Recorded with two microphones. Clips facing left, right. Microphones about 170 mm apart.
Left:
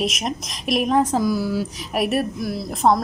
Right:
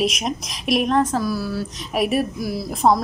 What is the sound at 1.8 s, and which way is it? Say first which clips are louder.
A woman's voice: right 4 dB; centre (ahead or behind).